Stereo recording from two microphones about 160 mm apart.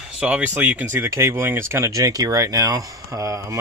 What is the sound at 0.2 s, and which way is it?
Speech, 10° right (ahead or behind).